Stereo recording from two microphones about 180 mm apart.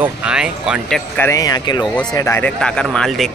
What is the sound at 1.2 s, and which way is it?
Speech, 20° left (ahead or behind).